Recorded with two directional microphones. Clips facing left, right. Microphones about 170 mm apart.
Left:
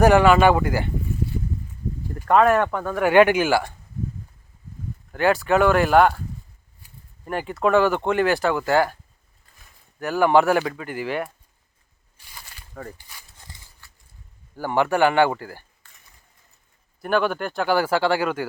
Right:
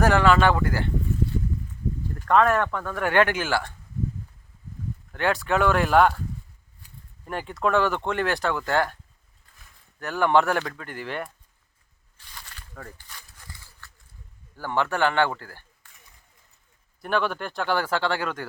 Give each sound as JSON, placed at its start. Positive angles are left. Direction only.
{"t": 0.0, "sound": "speech", "side_deg": 15}
{"t": 2.1, "sound": "speech", "side_deg": 10}
{"t": 5.1, "sound": "speech", "side_deg": 5}
{"t": 7.3, "sound": "speech", "side_deg": 5}
{"t": 10.0, "sound": "speech", "side_deg": 5}
{"t": 12.1, "sound": "walk", "side_deg": 10}
{"t": 13.3, "sound": "a sound", "side_deg": 20}
{"t": 14.5, "sound": "speech", "side_deg": 10}
{"t": 17.0, "sound": "speech", "side_deg": 5}